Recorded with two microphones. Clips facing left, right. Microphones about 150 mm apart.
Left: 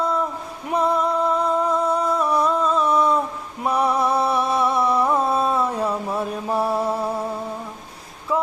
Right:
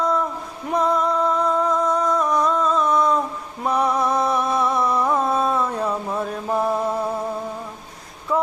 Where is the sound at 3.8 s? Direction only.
30° left (ahead or behind).